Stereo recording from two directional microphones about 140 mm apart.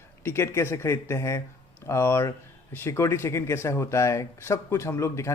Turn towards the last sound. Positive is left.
turn(degrees=20)  # may be behind; listen again after turning